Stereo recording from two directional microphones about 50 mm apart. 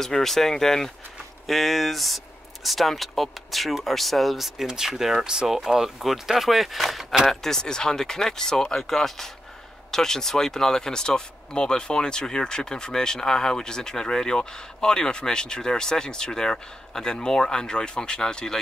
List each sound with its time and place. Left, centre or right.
0.0 s speech: centre